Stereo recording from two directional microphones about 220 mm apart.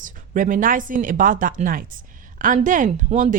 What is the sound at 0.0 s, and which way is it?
Speech, 35° right (ahead or behind).